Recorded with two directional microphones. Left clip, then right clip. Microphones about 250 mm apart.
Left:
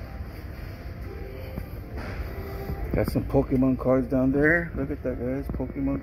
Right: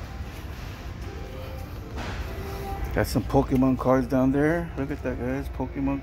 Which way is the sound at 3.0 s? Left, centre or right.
Centre.